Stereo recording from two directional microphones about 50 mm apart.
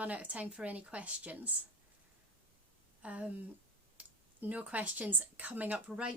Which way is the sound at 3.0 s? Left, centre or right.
Right.